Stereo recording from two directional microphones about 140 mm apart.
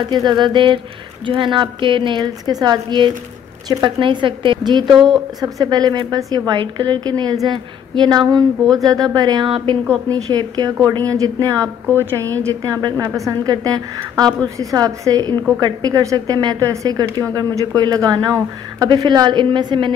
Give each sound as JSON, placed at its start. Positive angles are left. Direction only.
{"t": 0.1, "sound": "a woman's voice", "side_deg": -30}
{"t": 4.9, "sound": "speech", "side_deg": 0}
{"t": 5.4, "sound": "a woman's voice", "side_deg": -30}